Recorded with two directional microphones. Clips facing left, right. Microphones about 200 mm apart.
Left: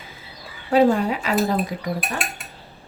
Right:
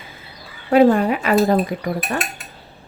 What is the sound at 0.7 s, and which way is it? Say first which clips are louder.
A woman's voice: right 4 dB; 55° right (ahead or behind).